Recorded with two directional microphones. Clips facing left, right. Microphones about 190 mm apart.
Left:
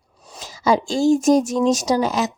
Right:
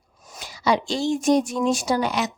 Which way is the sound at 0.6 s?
45° left (ahead or behind).